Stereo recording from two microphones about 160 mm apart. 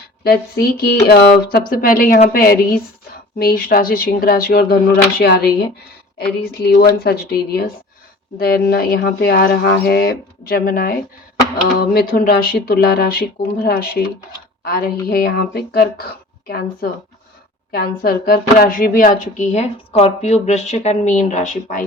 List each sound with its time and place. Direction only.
0.3 s a woman's voice: 75° left (ahead or behind); by 5.5 s 90° left
6.1 s speech: 80° left
17.7 s speech: 70° left (ahead or behind); by 21.8 s 50° left (ahead or behind)